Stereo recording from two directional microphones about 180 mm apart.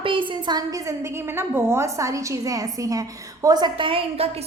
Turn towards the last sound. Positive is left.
turn(degrees=-30)  # may be behind; listen again after turning